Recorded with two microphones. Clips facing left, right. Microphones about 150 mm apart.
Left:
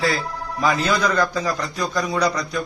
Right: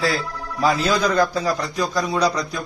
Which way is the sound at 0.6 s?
35° right (ahead or behind).